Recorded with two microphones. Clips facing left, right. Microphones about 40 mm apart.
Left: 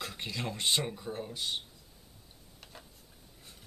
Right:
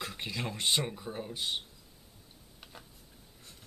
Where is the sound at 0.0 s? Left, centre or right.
Centre.